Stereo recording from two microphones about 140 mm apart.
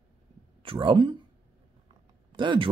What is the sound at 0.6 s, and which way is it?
Speech, 40° right (ahead or behind).